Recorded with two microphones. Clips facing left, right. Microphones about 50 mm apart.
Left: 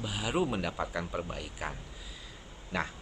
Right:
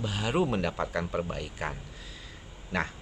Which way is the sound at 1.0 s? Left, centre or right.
Centre.